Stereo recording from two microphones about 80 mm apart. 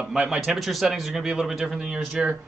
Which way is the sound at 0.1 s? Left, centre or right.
Centre.